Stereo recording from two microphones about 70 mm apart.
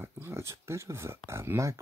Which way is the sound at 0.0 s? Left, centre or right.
Right.